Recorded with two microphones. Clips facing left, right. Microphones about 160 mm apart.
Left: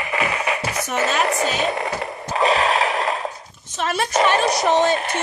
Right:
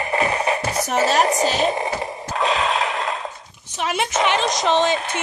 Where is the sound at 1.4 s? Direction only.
35° right (ahead or behind).